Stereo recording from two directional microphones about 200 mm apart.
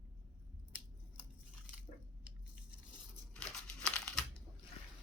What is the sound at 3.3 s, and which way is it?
Crumpling, 5° left (ahead or behind).